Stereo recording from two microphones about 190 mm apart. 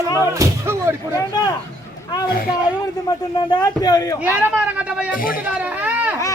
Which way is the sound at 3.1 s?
20° left (ahead or behind).